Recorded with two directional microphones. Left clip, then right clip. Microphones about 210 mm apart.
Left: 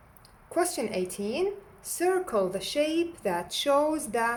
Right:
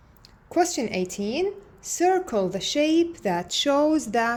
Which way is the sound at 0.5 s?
25° right (ahead or behind).